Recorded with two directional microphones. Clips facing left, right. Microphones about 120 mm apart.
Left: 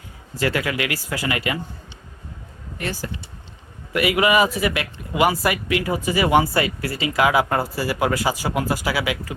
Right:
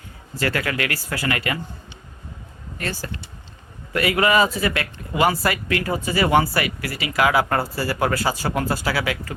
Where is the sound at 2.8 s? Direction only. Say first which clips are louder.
Left 1 dB; 15° left (ahead or behind).